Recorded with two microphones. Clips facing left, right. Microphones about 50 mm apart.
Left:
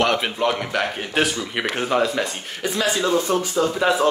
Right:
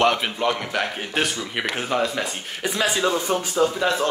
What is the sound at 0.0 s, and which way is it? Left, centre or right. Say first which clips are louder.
Speech: even; centre.